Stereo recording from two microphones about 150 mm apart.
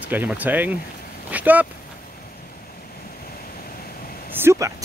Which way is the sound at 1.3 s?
10° right (ahead or behind).